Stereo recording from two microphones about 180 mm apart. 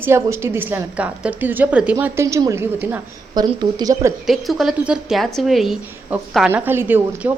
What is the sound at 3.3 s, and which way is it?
Speech, 25° right (ahead or behind).